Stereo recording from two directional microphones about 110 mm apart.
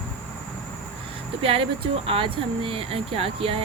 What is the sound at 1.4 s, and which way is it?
Speech, 55° right (ahead or behind).